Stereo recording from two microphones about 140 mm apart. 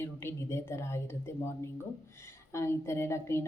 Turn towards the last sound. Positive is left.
turn(degrees=20)  # may be behind; listen again after turning